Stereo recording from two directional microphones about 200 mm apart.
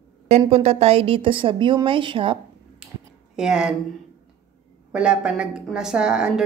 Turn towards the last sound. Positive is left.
turn(degrees=-5)  # may be behind; listen again after turning